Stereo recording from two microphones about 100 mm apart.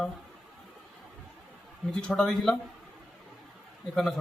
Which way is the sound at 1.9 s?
10° left (ahead or behind).